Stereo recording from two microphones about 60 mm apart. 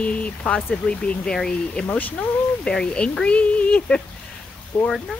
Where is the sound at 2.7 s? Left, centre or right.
Centre.